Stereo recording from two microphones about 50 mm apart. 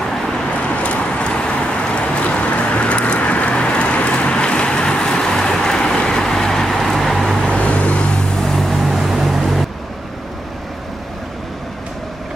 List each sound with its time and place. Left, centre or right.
0.8 s vehicle: left; by 7.3 s centre
7.3 s vehicle: left
8.4 s vehicle: centre